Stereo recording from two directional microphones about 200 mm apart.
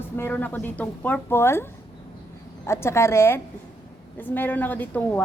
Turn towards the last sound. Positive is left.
turn(degrees=10)  # may be behind; listen again after turning